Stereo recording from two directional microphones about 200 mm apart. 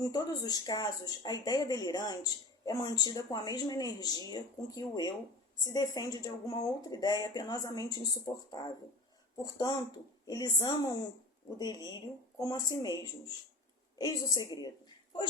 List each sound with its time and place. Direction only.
0.0 s speech: 20° left (ahead or behind)
14.3 s speech: 20° left (ahead or behind)